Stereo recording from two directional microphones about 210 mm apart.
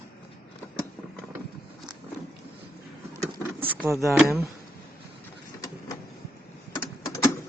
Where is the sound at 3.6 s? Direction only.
10° right (ahead or behind).